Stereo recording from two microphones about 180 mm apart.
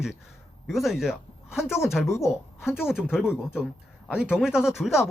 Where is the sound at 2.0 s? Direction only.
15° left (ahead or behind).